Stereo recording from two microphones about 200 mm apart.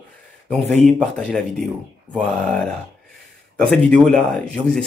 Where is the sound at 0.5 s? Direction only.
5° left (ahead or behind).